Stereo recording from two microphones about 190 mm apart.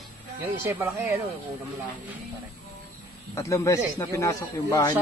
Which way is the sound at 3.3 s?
15° left (ahead or behind).